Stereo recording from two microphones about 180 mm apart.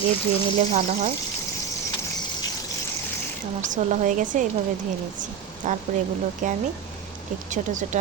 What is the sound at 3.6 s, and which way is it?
Speech, 45° right (ahead or behind).